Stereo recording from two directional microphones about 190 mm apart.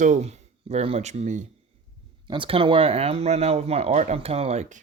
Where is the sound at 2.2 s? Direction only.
25° right (ahead or behind).